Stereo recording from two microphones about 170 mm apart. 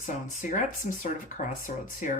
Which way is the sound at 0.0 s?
50° left (ahead or behind).